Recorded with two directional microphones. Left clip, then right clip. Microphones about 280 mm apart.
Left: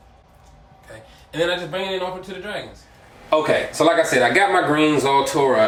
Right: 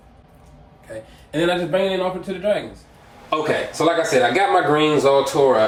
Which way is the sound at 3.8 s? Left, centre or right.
Centre.